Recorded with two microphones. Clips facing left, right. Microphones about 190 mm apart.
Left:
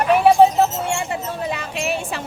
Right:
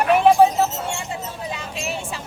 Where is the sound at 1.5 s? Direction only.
65° left (ahead or behind).